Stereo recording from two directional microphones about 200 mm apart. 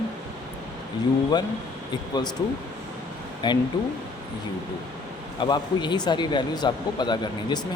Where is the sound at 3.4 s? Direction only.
25° left (ahead or behind).